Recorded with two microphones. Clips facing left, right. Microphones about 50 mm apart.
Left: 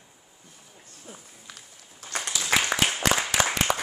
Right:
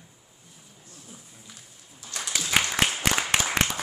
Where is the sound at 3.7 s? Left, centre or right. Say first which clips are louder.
Left 6 dB; left.